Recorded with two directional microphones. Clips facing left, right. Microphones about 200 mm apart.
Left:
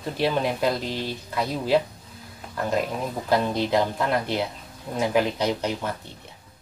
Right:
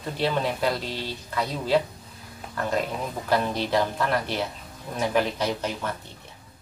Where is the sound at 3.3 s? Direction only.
15° left (ahead or behind).